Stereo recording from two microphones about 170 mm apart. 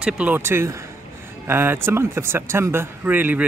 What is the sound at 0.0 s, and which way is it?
Speech, 10° right (ahead or behind).